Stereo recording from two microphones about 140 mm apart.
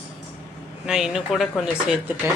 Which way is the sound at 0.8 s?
5° right (ahead or behind).